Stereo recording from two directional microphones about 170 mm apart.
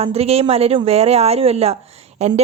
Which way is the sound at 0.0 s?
35° right (ahead or behind).